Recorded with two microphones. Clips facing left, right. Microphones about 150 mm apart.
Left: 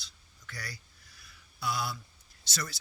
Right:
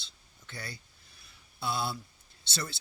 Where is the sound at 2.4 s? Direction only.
30° right (ahead or behind).